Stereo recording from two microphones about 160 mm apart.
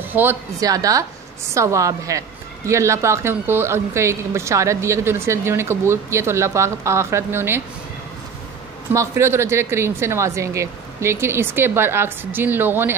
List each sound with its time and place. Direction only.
0.1 s a woman's voice: 10° right (ahead or behind)
8.9 s a woman's voice: 20° right (ahead or behind)